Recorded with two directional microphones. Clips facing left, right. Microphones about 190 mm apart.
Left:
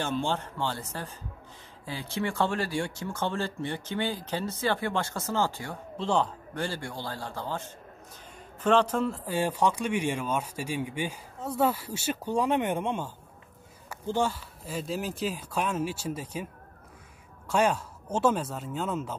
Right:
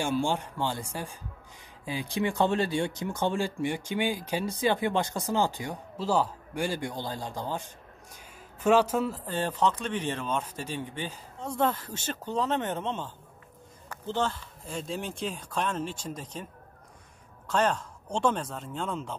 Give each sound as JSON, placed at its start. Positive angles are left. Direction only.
{"t": 0.0, "sound": "speech", "side_deg": -10}
{"t": 5.9, "sound": "speech", "side_deg": -5}
{"t": 9.2, "sound": "speech", "side_deg": 10}
{"t": 17.5, "sound": "speech", "side_deg": 10}